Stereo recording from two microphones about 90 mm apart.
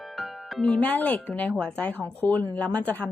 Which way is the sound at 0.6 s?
15° left (ahead or behind).